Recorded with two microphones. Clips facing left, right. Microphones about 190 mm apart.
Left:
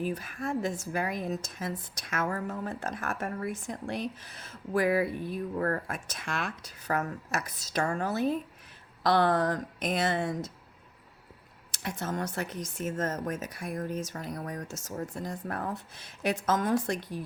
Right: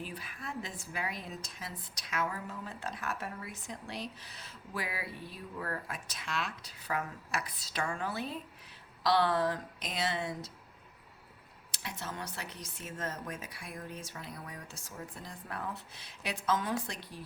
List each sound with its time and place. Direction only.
0.0 s a woman's voice: 45° left (ahead or behind)
11.7 s a woman's voice: 50° left (ahead or behind)